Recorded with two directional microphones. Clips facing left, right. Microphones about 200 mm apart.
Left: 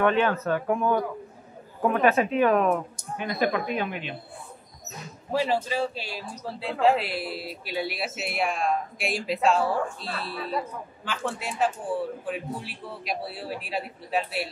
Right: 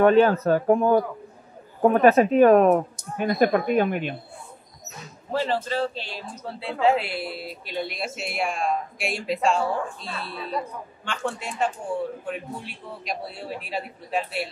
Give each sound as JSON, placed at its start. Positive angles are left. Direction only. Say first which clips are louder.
{"t": 0.0, "sound": "a woman's voice", "louder": "right 6 dB", "side_deg": -40}
{"t": 5.3, "sound": "a man's voice", "louder": "even", "side_deg": 10}